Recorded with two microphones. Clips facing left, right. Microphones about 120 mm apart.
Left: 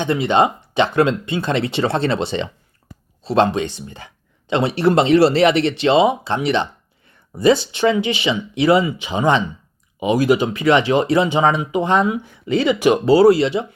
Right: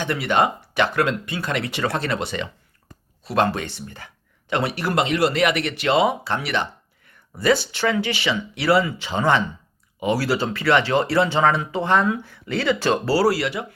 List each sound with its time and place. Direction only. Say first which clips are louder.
0.0 s speech: left 4 dB; 20° left (ahead or behind)